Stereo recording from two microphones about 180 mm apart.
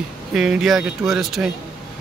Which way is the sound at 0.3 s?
5° right (ahead or behind).